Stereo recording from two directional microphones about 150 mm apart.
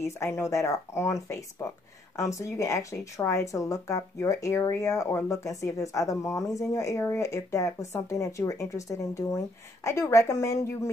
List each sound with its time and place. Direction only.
0.0 s speech: 20° left (ahead or behind)